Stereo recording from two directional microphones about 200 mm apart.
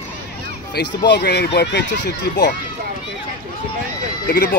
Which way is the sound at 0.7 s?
55° left (ahead or behind).